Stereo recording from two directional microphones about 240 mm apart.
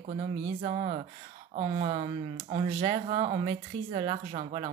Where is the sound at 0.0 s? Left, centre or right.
Right.